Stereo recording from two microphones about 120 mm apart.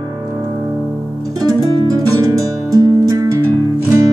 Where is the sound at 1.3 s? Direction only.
35° right (ahead or behind).